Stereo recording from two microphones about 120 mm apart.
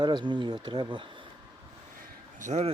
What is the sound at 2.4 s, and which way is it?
Speech, 75° right (ahead or behind).